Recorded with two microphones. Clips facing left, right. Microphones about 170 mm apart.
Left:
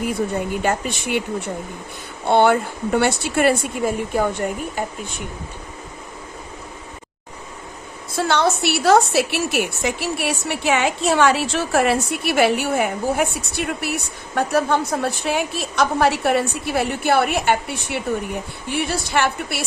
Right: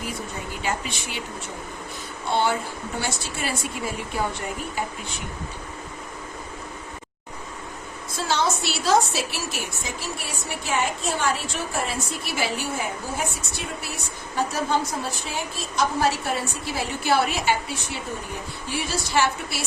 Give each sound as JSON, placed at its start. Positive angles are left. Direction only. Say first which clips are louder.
{"t": 0.6, "sound": "a woman's voice", "louder": "left 7 dB", "side_deg": 50}
{"t": 8.1, "sound": "a woman's voice", "louder": "left 6 dB", "side_deg": 65}